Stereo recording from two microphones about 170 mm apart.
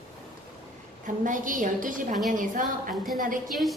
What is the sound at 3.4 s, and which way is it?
Speech, centre (ahead or behind).